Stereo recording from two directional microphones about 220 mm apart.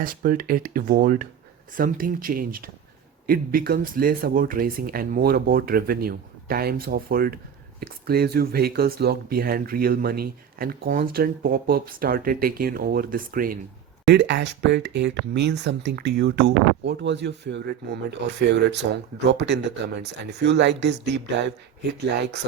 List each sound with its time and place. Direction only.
0.0 s speech: 40° right (ahead or behind)
14.1 s speech: 50° right (ahead or behind)